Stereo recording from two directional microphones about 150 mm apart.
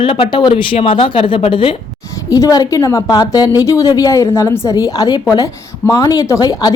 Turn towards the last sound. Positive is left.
turn(degrees=25)  # may be behind; listen again after turning